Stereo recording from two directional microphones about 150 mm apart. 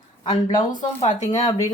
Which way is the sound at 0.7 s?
60° left (ahead or behind).